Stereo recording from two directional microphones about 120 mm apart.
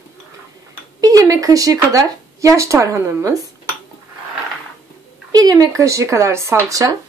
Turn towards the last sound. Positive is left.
turn(degrees=-30)  # may be behind; listen again after turning